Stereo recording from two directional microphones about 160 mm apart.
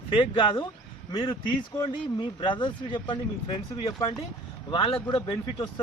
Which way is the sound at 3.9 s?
25° left (ahead or behind).